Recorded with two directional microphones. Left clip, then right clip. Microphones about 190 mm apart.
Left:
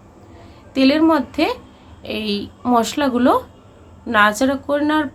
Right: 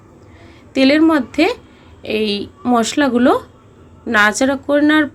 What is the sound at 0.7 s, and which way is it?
Speech, 15° right (ahead or behind).